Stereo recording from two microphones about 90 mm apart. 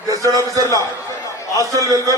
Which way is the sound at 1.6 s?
40° right (ahead or behind).